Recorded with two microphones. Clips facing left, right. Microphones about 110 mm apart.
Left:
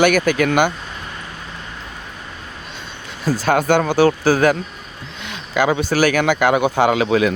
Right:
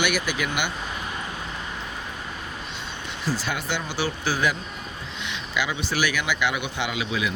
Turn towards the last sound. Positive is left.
turn(degrees=50)  # may be behind; listen again after turning